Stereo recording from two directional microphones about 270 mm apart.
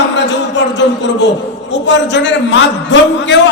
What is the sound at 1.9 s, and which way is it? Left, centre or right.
A man's voice, left.